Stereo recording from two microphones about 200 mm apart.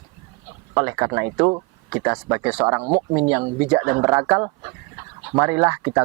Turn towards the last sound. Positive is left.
turn(degrees=-15)  # may be behind; listen again after turning